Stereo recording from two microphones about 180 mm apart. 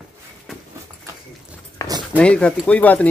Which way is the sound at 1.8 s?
15° left (ahead or behind).